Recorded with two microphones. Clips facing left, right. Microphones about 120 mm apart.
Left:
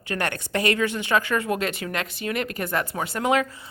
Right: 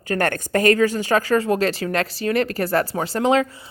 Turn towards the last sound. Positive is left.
turn(degrees=-30)  # may be behind; listen again after turning